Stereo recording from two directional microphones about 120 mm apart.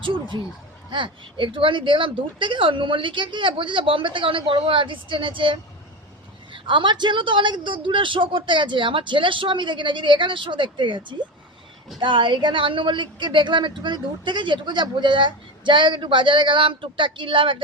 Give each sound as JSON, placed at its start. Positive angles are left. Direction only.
{"t": 0.0, "sound": "speech", "side_deg": -45}